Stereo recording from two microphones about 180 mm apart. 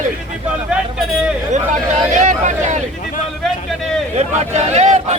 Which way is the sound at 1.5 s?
40° right (ahead or behind).